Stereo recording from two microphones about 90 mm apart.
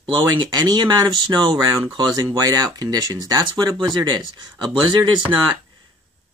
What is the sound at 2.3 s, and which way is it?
Speech, 40° right (ahead or behind).